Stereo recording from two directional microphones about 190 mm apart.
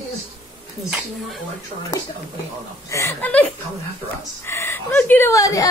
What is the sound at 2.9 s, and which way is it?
Speech, 15° left (ahead or behind).